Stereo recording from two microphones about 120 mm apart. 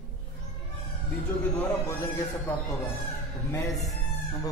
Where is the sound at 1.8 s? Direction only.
25° left (ahead or behind).